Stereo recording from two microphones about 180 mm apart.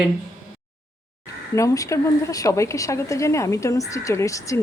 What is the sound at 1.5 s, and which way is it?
Speech, 15° left (ahead or behind).